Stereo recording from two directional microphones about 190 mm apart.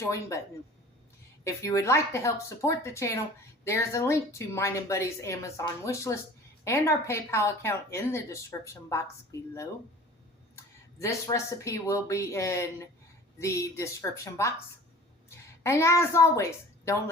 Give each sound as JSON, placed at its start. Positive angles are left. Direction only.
{"t": 0.0, "sound": "a woman's voice", "side_deg": 15}
{"t": 1.5, "sound": "a woman's voice", "side_deg": 15}
{"t": 10.5, "sound": "a woman's voice", "side_deg": 15}
{"t": 15.6, "sound": "a woman's voice", "side_deg": 15}